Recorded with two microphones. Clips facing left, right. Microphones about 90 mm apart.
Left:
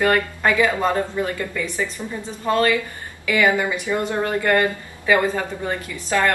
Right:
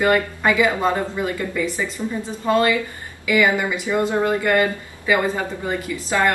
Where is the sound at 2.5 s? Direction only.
15° right (ahead or behind).